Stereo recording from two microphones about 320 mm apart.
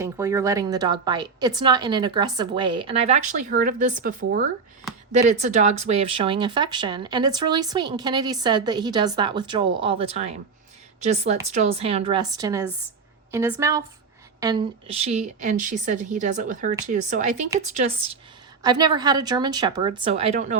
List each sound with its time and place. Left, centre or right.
0.0 s a woman's voice: centre